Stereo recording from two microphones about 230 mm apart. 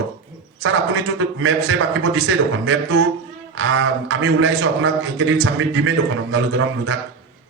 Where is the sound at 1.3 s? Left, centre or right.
Right.